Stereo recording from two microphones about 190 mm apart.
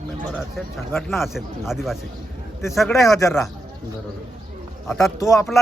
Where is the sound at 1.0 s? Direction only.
Centre (ahead or behind).